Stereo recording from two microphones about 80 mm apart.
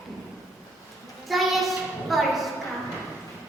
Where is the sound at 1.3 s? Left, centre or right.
Centre.